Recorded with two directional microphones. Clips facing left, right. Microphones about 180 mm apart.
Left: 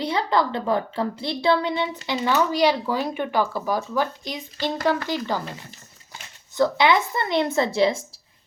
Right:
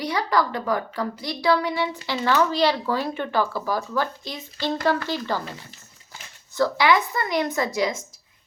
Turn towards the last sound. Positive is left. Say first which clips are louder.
# left 4 dB
turn(degrees=30)  # may be behind; listen again after turning